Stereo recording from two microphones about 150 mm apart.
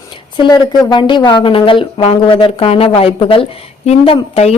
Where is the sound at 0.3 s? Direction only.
30° left (ahead or behind).